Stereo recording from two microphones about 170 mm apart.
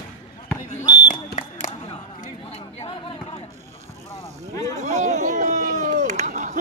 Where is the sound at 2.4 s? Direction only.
35° left (ahead or behind).